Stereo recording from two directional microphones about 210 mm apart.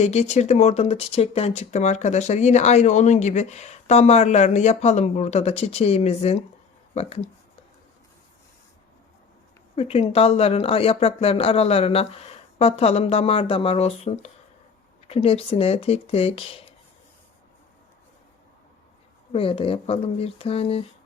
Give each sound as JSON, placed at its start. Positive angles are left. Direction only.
{"t": 0.0, "sound": "speech", "side_deg": 30}
{"t": 9.7, "sound": "speech", "side_deg": 30}
{"t": 19.3, "sound": "speech", "side_deg": 25}